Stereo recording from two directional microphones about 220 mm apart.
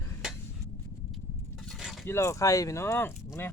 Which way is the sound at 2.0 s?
10° left (ahead or behind).